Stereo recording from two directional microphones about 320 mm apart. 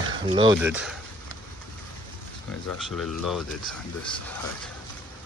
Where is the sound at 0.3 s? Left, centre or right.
Centre.